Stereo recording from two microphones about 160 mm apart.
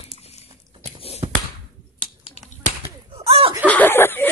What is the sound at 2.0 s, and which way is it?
Finger snapping, 40° left (ahead or behind).